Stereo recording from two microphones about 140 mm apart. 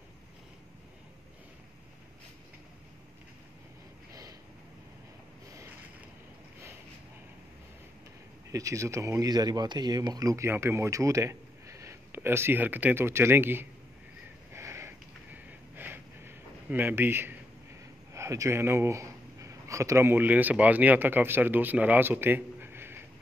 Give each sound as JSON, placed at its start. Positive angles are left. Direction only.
{"t": 4.1, "sound": "a sound", "side_deg": -25}
{"t": 8.5, "sound": "speech", "side_deg": -20}
{"t": 14.5, "sound": "sniff", "side_deg": -20}
{"t": 18.1, "sound": "speech", "side_deg": -20}